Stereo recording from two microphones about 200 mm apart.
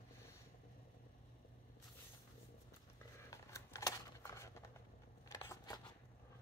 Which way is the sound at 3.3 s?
15° left (ahead or behind).